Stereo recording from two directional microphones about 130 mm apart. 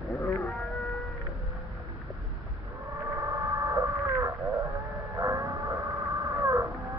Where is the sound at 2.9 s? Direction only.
25° right (ahead or behind).